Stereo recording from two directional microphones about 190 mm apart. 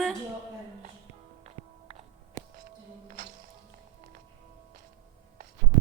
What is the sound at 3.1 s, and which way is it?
Music, 40° right (ahead or behind).